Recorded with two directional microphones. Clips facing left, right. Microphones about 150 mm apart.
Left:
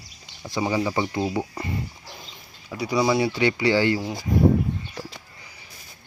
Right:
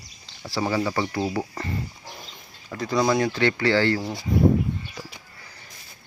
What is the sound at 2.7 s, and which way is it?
Speech, 10° left (ahead or behind).